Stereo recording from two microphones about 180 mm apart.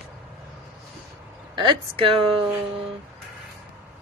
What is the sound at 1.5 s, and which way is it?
Speech, 30° right (ahead or behind).